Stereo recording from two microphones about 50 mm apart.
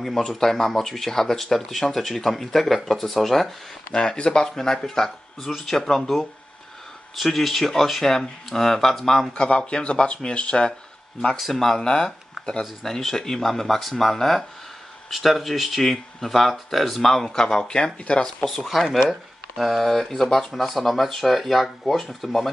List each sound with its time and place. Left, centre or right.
0.0 s speech: centre
3.9 s speech: centre
9.3 s speech: centre
11.3 s speech: centre
18.7 s speech: centre